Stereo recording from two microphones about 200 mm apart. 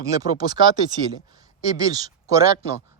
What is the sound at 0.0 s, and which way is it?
Speech, 15° right (ahead or behind).